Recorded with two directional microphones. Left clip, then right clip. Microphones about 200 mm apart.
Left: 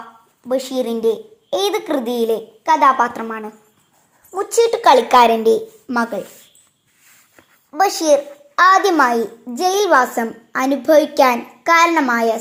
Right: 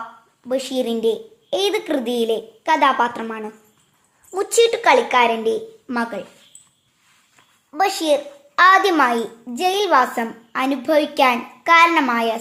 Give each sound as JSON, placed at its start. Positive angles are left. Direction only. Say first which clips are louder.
{"t": 0.4, "sound": "a woman's voice", "louder": "left 2 dB", "side_deg": 0}
{"t": 4.7, "sound": "speech", "louder": "left 4 dB", "side_deg": 10}
{"t": 7.9, "sound": "a child's voice", "louder": "left 4 dB", "side_deg": -15}
{"t": 8.7, "sound": "a woman's voice", "louder": "left 2 dB", "side_deg": 0}